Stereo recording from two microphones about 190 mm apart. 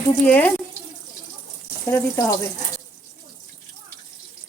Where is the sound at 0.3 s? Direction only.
5° left (ahead or behind).